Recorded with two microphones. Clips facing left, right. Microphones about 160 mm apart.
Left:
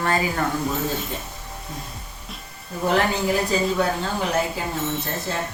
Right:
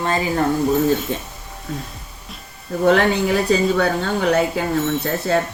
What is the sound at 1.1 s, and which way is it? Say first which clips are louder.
Speech: right 6 dB; 65° right (ahead or behind).